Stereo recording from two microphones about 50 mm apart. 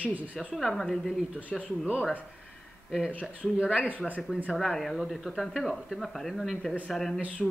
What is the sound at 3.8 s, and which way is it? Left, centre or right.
Speech, right.